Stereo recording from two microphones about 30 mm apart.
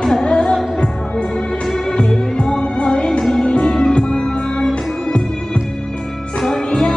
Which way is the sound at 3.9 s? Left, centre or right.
Left.